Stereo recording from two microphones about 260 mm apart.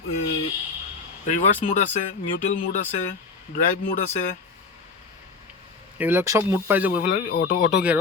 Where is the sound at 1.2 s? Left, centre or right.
Left.